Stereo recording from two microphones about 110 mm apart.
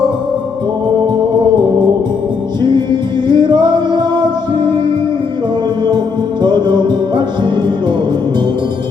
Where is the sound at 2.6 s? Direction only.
40° right (ahead or behind).